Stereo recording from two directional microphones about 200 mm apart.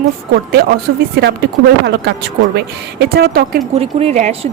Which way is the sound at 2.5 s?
55° right (ahead or behind).